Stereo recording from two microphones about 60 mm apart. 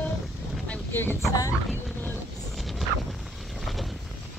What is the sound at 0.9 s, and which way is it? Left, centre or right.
Speech, left.